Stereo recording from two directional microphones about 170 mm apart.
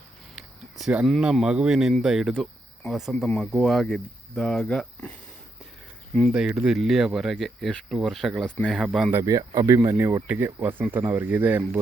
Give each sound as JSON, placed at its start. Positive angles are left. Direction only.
{"t": 0.3, "sound": "speech", "side_deg": -5}
{"t": 6.3, "sound": "speech", "side_deg": -5}
{"t": 9.1, "sound": "speech", "side_deg": -20}